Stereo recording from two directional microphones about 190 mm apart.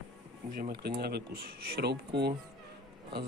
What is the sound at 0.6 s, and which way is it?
Speech, 55° right (ahead or behind).